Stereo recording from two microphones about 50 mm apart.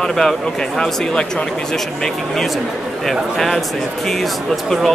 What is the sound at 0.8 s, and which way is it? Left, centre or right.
Speech, centre.